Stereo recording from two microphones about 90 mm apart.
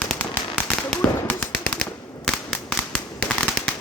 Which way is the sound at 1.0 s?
15° left (ahead or behind).